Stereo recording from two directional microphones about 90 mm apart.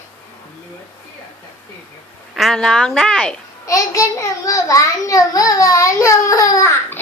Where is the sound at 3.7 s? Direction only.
40° left (ahead or behind).